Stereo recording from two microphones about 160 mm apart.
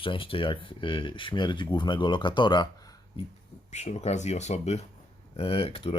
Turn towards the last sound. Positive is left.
turn(degrees=35)  # may be behind; listen again after turning